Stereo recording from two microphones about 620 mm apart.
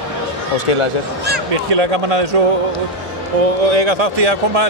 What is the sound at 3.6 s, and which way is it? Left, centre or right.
Speech, right.